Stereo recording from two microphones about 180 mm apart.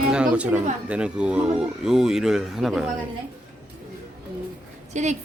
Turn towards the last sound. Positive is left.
turn(degrees=-40)  # may be behind; listen again after turning